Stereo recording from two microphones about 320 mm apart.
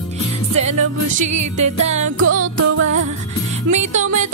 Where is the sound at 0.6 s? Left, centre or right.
Right.